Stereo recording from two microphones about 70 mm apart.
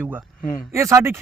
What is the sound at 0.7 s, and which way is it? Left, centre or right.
Speech, right.